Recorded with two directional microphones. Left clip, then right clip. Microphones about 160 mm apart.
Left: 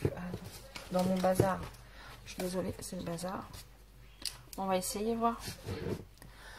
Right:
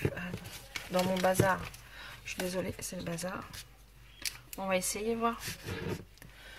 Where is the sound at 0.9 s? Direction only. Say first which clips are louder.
Right 1 dB; 50° right (ahead or behind).